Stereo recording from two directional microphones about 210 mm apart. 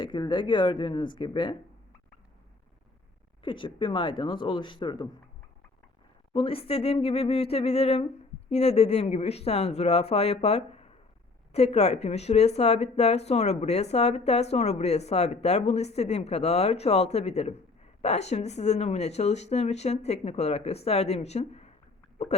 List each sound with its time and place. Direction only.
0.0 s speech: 20° left (ahead or behind)
3.4 s speech: 25° left (ahead or behind)
6.3 s speech: 25° left (ahead or behind)